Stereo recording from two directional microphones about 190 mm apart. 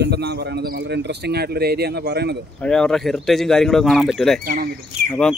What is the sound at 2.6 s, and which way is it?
Speech, 5° left (ahead or behind).